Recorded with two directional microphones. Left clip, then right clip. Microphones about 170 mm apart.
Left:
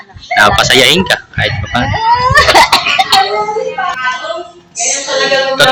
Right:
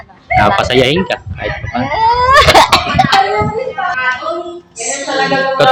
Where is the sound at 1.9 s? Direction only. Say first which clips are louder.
Even; 40° right (ahead or behind).